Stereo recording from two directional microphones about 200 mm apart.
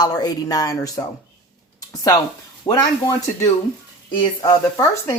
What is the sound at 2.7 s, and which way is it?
Speech, 20° left (ahead or behind).